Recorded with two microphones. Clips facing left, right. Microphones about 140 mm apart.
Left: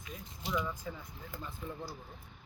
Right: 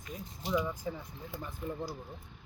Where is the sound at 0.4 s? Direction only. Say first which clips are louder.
Right 4 dB; 15° right (ahead or behind).